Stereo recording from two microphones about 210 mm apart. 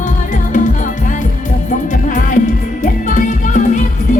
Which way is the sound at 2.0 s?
35° left (ahead or behind).